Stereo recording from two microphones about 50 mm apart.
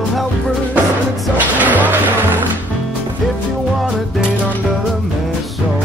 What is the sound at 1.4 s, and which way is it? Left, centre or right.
Music, right.